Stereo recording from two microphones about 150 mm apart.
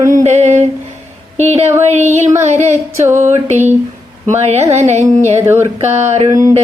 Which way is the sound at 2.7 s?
15° right (ahead or behind).